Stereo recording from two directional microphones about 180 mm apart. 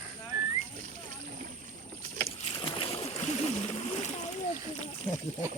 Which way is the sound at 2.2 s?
30° left (ahead or behind).